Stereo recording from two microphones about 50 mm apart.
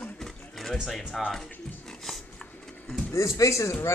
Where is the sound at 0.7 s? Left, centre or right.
Centre.